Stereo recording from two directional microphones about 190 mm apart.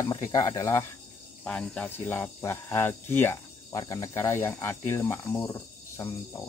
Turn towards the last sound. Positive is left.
turn(degrees=15)  # may be behind; listen again after turning